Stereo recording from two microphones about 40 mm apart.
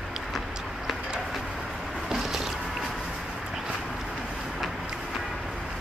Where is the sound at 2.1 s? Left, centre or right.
Centre.